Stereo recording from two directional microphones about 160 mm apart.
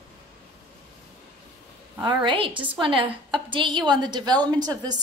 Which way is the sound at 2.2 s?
30° right (ahead or behind).